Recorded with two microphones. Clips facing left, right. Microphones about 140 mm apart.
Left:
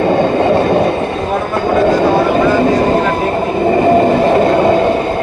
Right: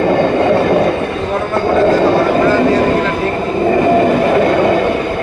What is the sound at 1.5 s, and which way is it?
Vehicle, 10° left (ahead or behind).